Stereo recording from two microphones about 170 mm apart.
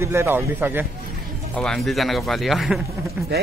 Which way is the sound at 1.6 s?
5° left (ahead or behind).